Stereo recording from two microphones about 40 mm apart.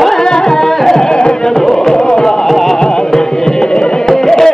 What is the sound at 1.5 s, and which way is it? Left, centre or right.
Music, centre.